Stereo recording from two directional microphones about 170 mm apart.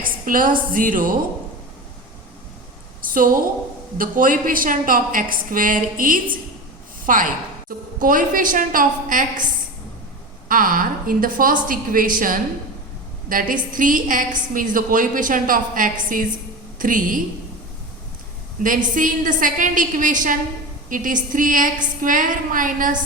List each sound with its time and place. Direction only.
0.0 s a woman's voice: 55° right (ahead or behind)
3.1 s a woman's voice: 55° right (ahead or behind)
10.5 s a woman's voice: 55° right (ahead or behind)
18.6 s a woman's voice: 50° right (ahead or behind)